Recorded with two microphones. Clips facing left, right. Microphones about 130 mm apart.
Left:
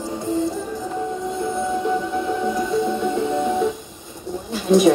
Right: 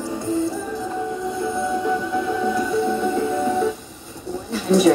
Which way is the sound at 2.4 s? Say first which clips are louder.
Even; 15° left (ahead or behind).